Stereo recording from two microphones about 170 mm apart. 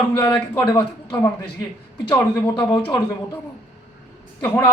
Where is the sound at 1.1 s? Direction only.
15° left (ahead or behind).